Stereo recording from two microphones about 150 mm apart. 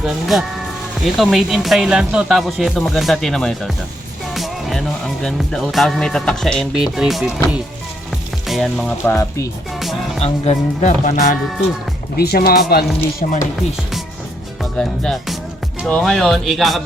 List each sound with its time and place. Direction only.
0.0 s speech: centre (ahead or behind)
9.0 s speech: 20° left (ahead or behind)
10.2 s speech: 50° left (ahead or behind)
12.1 s speech: 90° left
13.1 s music: 60° left (ahead or behind)
14.6 s speech: 5° left (ahead or behind)